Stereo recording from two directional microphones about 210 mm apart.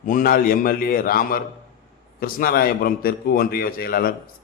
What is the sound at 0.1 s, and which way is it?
A man's voice, 40° left (ahead or behind).